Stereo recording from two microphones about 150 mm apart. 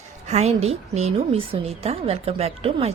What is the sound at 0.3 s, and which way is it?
A woman's voice, 45° right (ahead or behind).